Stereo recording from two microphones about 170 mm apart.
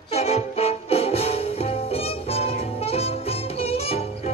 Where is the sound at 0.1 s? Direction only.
35° left (ahead or behind).